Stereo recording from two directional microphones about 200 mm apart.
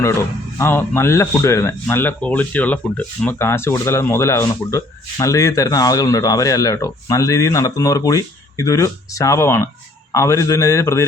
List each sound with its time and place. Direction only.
0.6 s speech: 10° left (ahead or behind)